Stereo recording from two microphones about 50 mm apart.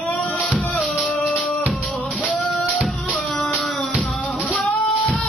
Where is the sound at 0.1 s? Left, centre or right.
Left.